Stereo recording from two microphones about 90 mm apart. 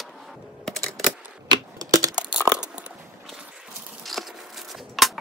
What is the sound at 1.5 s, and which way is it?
Typewriter, 45° right (ahead or behind).